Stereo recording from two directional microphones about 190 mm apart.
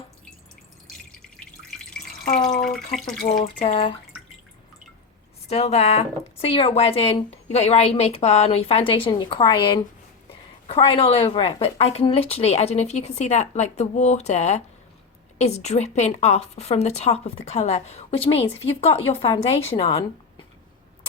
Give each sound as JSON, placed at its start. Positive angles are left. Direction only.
{"t": 1.7, "sound": "drip", "side_deg": 5}
{"t": 3.6, "sound": "a woman's voice", "side_deg": 30}
{"t": 5.5, "sound": "a woman's voice", "side_deg": 35}